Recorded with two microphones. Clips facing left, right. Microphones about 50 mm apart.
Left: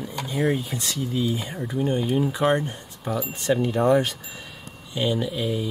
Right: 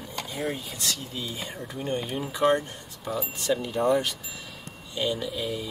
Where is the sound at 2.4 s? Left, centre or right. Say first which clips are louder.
Left 1 dB; left.